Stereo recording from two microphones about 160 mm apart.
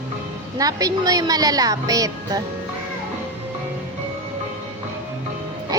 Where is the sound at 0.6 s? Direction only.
20° right (ahead or behind).